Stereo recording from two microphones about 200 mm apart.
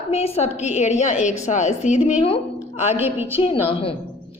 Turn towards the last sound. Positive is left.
turn(degrees=30)  # may be behind; listen again after turning